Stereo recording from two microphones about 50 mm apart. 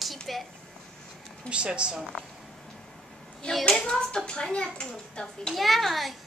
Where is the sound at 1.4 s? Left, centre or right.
Right.